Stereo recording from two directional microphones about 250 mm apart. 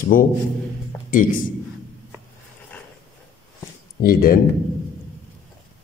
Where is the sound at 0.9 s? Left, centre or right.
Centre.